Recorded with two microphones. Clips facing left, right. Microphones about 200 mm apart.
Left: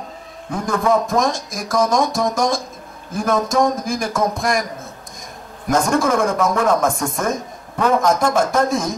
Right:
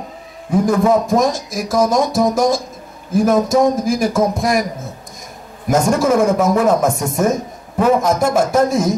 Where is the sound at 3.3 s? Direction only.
25° right (ahead or behind).